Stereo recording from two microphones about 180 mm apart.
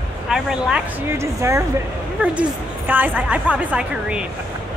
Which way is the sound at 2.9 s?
10° right (ahead or behind).